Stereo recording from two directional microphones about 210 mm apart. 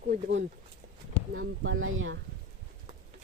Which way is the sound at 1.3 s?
70° right (ahead or behind).